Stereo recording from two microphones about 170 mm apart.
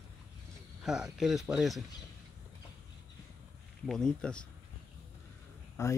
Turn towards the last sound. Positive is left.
turn(degrees=15)  # may be behind; listen again after turning